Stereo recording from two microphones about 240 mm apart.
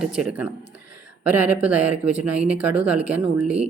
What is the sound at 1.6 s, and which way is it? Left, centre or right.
Speech, centre.